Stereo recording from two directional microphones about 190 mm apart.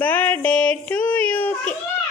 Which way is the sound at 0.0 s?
10° left (ahead or behind).